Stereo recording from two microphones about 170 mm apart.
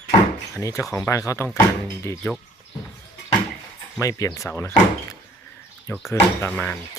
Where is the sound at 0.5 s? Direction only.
20° left (ahead or behind).